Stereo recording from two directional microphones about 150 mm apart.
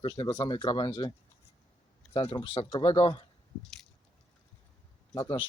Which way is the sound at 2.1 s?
35° left (ahead or behind).